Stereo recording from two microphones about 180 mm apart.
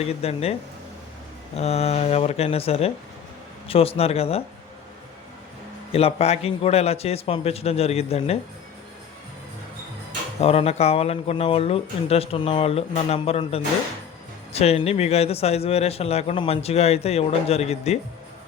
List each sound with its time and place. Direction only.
0.0 s speech: 35° left (ahead or behind)
1.5 s speech: 35° left (ahead or behind)
5.9 s speech: 35° left (ahead or behind)
10.4 s speech: 35° left (ahead or behind)